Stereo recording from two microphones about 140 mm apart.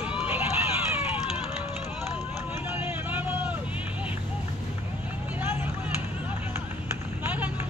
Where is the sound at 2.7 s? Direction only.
15° right (ahead or behind).